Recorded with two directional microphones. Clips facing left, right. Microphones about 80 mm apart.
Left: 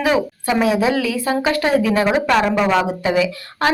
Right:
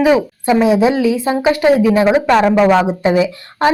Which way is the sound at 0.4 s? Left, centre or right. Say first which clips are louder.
Right 6 dB; right.